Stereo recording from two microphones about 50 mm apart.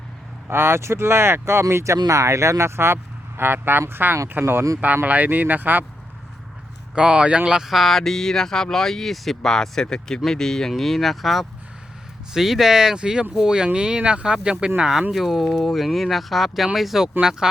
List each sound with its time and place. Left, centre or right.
0.5 s speech: right
5.0 s speech: right
6.9 s speech: centre
7.7 s speech: centre